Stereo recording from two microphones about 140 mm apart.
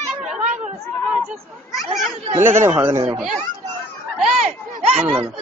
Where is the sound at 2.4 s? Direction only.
15° right (ahead or behind).